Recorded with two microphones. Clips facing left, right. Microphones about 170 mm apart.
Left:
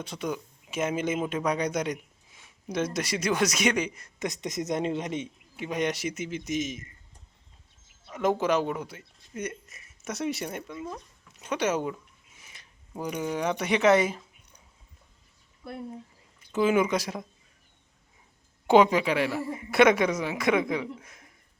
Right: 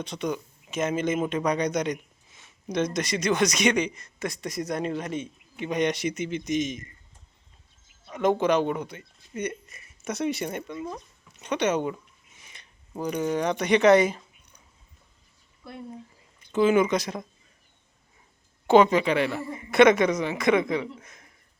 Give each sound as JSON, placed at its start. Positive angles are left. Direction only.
{"t": 0.0, "sound": "speech", "side_deg": 5}
{"t": 4.2, "sound": "speech", "side_deg": 20}
{"t": 5.5, "sound": "a man's voice", "side_deg": 5}
{"t": 8.1, "sound": "speech", "side_deg": 5}
{"t": 10.8, "sound": "speech", "side_deg": -10}
{"t": 11.3, "sound": "a sound", "side_deg": 5}
{"t": 13.0, "sound": "a man's voice", "side_deg": 5}
{"t": 16.4, "sound": "a woman's voice", "side_deg": 5}
{"t": 18.7, "sound": "a woman's voice", "side_deg": 10}